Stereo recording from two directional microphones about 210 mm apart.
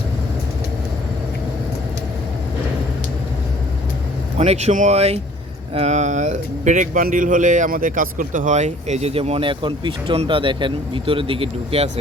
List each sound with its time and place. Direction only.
4.4 s a man's voice: 30° right (ahead or behind)